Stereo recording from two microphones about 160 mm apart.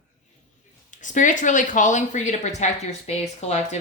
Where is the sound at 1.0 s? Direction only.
50° left (ahead or behind).